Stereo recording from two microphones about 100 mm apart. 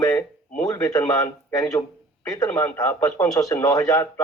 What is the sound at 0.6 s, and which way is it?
Speech, 35° left (ahead or behind).